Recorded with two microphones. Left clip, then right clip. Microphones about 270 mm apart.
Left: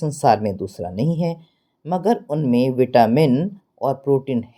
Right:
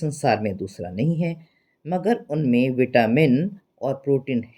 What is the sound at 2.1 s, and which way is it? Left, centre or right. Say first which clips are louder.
Speech: left 2 dB; left.